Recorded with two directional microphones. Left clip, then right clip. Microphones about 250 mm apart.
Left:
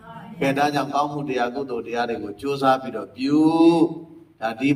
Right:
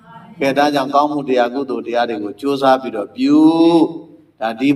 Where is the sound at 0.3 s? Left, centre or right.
Centre.